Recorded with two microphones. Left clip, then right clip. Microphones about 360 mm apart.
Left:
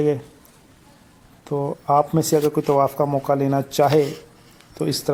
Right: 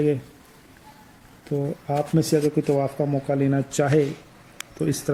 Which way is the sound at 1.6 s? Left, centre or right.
Left.